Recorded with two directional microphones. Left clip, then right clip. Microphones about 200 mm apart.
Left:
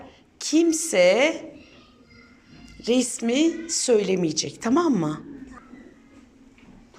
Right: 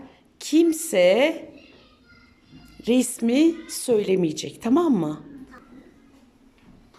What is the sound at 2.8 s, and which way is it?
A woman's voice, 20° right (ahead or behind).